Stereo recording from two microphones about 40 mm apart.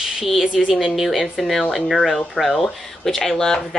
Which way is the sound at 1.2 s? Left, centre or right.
Centre.